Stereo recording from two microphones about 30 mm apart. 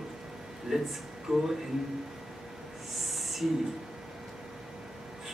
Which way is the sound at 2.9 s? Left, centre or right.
Centre.